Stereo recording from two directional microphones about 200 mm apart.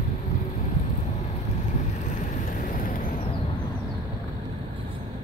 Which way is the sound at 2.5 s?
45° left (ahead or behind).